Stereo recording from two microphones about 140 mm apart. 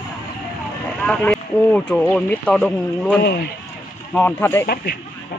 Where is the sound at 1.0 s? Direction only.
5° left (ahead or behind).